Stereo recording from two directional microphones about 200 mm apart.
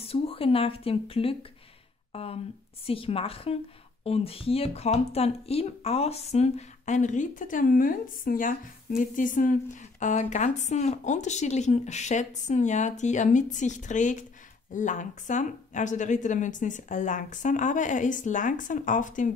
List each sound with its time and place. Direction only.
0.0 s a woman's voice: 30° left (ahead or behind)